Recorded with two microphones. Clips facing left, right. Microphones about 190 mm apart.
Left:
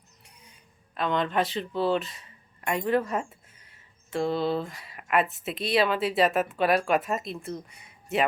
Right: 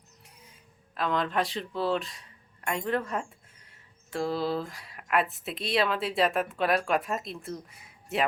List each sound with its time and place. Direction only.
0.3 s speech: centre (ahead or behind)